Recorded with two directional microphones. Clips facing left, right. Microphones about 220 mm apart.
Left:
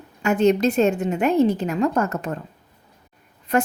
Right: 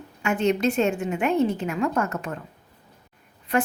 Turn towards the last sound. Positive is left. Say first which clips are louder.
# left 3 dB
turn(degrees=40)  # may be behind; listen again after turning